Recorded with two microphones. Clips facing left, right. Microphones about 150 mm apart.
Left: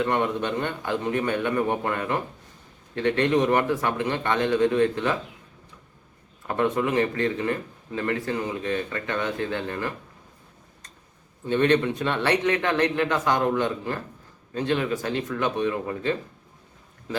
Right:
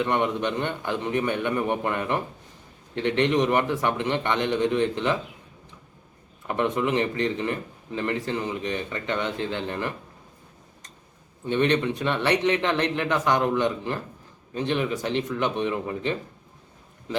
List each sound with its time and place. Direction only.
0.0 s speech: 20° right (ahead or behind)
6.6 s speech: 20° right (ahead or behind)
11.4 s speech: 20° right (ahead or behind)